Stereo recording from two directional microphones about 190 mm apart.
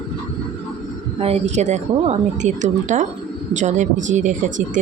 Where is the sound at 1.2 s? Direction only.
35° right (ahead or behind).